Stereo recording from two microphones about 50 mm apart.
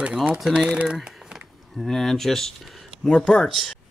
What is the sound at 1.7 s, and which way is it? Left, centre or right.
Speech, centre.